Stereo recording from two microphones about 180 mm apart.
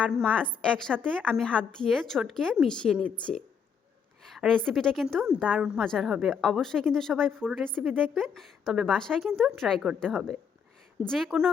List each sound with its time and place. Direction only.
0.0 s a woman's voice: 5° left (ahead or behind)